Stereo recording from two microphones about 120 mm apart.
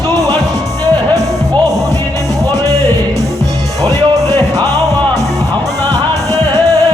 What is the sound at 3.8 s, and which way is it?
Music, 30° right (ahead or behind).